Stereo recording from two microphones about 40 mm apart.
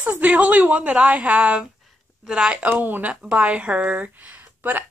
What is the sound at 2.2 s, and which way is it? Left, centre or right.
Speech, centre.